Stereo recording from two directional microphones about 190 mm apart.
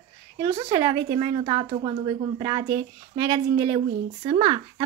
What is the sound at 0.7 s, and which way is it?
Speech, 20° right (ahead or behind).